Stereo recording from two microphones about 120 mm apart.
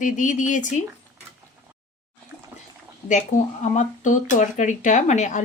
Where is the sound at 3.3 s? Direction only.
90° left.